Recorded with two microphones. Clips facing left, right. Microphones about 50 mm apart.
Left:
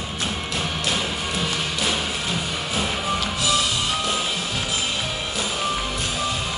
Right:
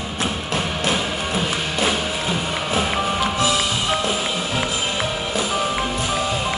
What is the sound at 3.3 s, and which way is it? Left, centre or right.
Music, right.